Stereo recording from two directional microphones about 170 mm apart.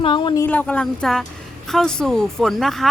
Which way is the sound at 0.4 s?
10° left (ahead or behind).